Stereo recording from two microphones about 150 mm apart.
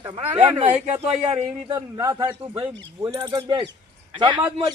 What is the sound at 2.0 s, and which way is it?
Speech, 25° right (ahead or behind).